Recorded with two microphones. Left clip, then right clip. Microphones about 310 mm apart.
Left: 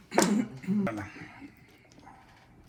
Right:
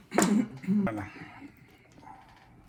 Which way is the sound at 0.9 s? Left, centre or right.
Right.